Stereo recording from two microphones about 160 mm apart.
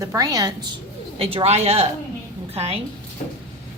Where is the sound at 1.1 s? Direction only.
35° right (ahead or behind).